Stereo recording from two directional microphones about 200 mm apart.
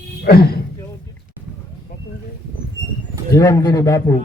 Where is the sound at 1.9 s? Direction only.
45° left (ahead or behind).